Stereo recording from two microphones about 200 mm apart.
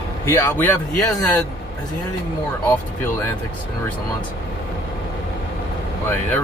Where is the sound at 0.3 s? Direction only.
10° left (ahead or behind).